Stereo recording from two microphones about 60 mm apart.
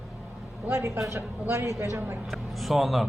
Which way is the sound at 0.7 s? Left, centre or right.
Right.